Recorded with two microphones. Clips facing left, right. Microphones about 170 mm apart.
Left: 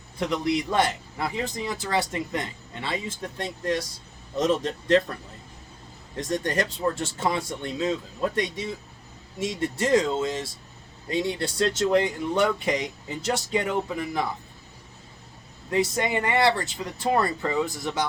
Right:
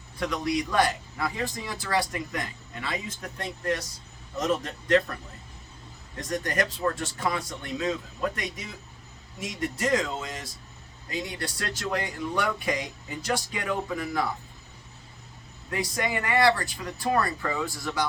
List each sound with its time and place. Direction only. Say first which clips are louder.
0.2 s a man's voice: left 2 dB; 25° left (ahead or behind)
6.1 s a man's voice: left 2 dB; 25° left (ahead or behind)
15.7 s a man's voice: left 5 dB; 25° left (ahead or behind)